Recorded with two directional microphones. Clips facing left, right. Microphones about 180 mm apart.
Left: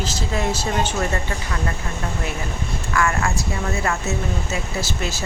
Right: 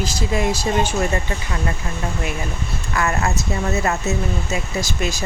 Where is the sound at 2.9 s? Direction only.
20° right (ahead or behind).